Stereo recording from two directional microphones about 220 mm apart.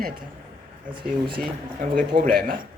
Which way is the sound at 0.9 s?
20° right (ahead or behind).